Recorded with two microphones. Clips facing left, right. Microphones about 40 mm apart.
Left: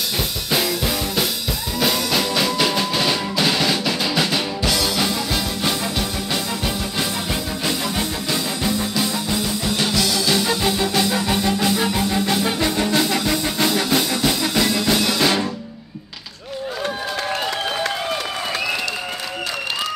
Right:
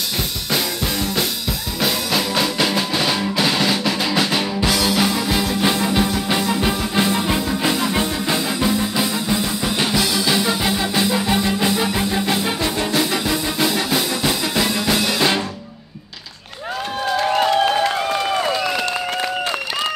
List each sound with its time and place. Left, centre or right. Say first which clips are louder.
1.8 s music: left 1 dB; centre